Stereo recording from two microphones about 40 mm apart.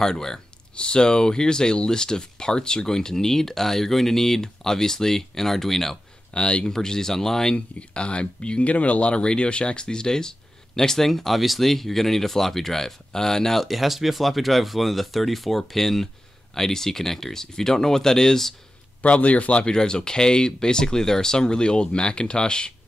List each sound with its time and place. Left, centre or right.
0.0 s speech: centre
6.3 s speech: left
6.6 s speech: centre
7.5 s speech: left; by 13.7 s centre
13.7 s speech: centre
19.0 s speech: left
19.6 s speech: centre